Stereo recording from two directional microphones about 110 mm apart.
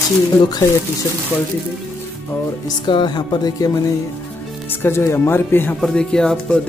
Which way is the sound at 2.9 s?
45° left (ahead or behind).